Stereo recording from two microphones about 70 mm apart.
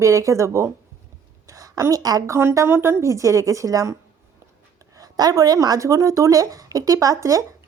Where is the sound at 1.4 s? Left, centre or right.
Right.